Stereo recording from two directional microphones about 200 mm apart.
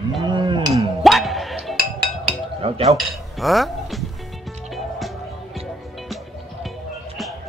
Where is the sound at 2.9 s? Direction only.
Centre (ahead or behind).